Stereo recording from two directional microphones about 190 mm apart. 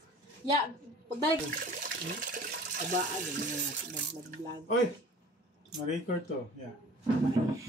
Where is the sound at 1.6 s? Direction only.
50° right (ahead or behind).